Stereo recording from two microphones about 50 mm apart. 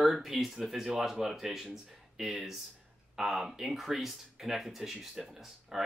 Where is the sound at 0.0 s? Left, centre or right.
Centre.